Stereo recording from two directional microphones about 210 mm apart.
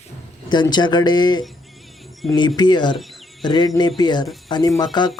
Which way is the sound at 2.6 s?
20° left (ahead or behind).